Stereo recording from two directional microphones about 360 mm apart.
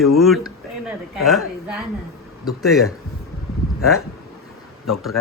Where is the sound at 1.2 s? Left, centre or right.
Centre.